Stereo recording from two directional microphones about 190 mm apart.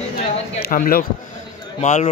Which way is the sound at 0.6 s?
50° left (ahead or behind).